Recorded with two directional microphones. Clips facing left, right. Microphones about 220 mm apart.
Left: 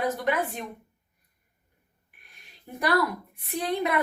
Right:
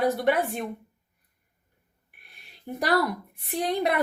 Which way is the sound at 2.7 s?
35° right (ahead or behind).